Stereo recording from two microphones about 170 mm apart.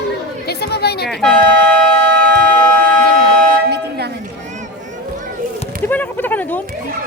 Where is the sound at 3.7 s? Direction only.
75° right (ahead or behind).